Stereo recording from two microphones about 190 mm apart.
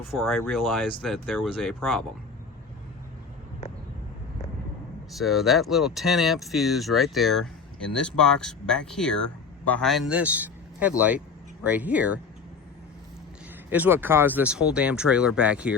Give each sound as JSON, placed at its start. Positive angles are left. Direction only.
{"t": 0.1, "sound": "speech", "side_deg": 0}
{"t": 5.1, "sound": "a man's voice", "side_deg": 0}
{"t": 13.7, "sound": "speech", "side_deg": -10}